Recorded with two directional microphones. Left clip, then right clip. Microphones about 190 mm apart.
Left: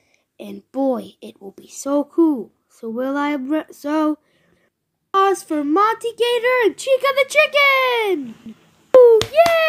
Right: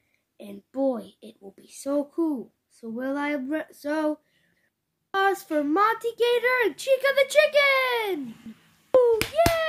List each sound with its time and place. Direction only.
0.4 s a woman's voice: 30° left (ahead or behind)
9.0 s hands: 25° left (ahead or behind)